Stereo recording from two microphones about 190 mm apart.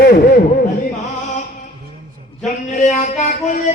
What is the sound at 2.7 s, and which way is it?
Speech, 40° left (ahead or behind).